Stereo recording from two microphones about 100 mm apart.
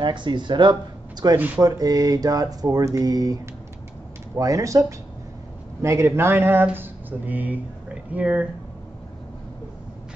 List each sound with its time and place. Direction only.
0.0 s speech: 50° right (ahead or behind)
4.4 s speech: 35° right (ahead or behind); by 8.5 s 15° right (ahead or behind)